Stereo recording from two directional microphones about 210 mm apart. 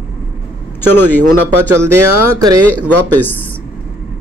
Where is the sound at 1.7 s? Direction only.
90° right.